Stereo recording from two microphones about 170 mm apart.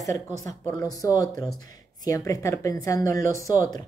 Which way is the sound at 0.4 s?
20° left (ahead or behind).